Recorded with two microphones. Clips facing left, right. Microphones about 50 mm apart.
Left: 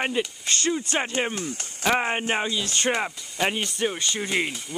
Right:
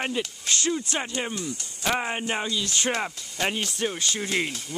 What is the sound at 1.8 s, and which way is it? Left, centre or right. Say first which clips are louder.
Speech: left 3 dB; left.